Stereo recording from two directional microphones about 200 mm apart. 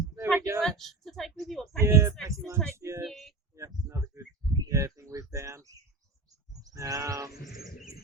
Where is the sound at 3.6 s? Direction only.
15° right (ahead or behind).